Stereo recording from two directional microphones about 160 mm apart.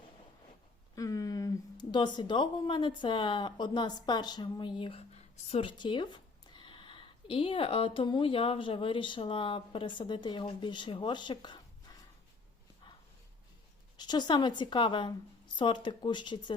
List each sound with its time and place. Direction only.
0.9 s speech: 20° left (ahead or behind)
13.9 s a woman's voice: 25° left (ahead or behind)